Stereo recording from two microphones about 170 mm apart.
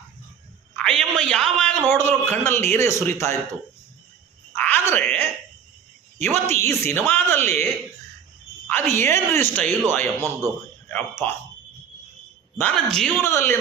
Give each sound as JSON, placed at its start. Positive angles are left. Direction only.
{"t": 0.8, "sound": "a man's voice", "side_deg": 5}
{"t": 4.5, "sound": "a sound", "side_deg": 10}
{"t": 6.1, "sound": "a man's voice", "side_deg": 10}
{"t": 8.9, "sound": "speech", "side_deg": 15}
{"t": 10.2, "sound": "a man's voice", "side_deg": -20}
{"t": 10.8, "sound": "speech", "side_deg": 10}
{"t": 12.5, "sound": "a man's voice", "side_deg": 5}
{"t": 13.2, "sound": "speech", "side_deg": 15}